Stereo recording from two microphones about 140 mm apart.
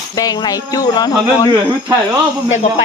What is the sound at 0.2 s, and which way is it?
Speech, 30° left (ahead or behind).